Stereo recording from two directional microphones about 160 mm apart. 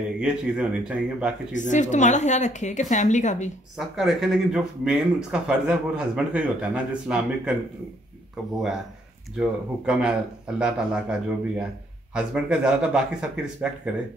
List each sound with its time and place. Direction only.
0.2 s speech: 5° right (ahead or behind)
1.5 s speech: 50° left (ahead or behind)
3.7 s speech: centre (ahead or behind)
9.4 s speech: 5° right (ahead or behind)